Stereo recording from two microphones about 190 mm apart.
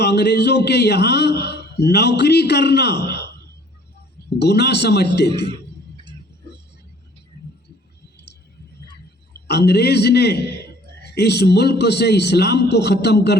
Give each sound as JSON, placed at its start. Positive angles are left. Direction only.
{"t": 0.0, "sound": "a man's voice", "side_deg": 60}
{"t": 4.4, "sound": "a man's voice", "side_deg": 60}
{"t": 9.5, "sound": "a man's voice", "side_deg": 60}